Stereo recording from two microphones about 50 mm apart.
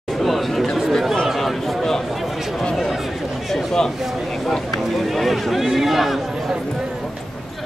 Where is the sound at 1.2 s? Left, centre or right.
Centre.